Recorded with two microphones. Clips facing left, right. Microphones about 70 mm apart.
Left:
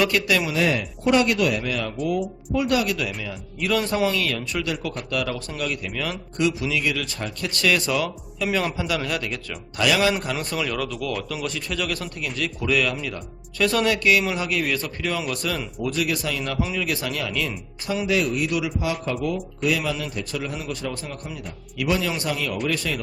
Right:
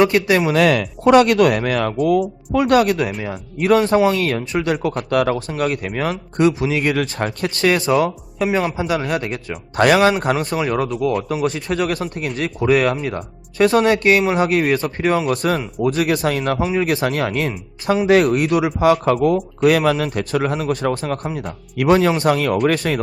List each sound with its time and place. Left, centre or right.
0.0 s speech: right
0.5 s speech: right
7.5 s speech: right
8.4 s speech: right
8.9 s speech: right